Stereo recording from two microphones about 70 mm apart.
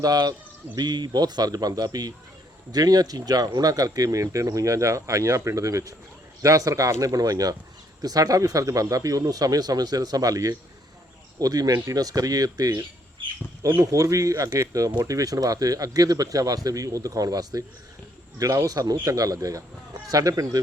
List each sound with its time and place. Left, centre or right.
0.0 s speech: right
0.8 s speech: right
13.9 s speech: right